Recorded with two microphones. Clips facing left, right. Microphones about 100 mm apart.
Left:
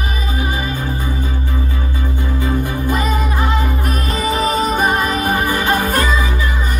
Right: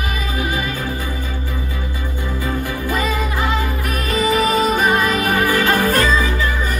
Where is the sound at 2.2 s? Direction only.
20° left (ahead or behind).